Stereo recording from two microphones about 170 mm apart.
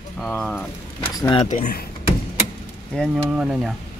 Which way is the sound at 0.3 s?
5° left (ahead or behind).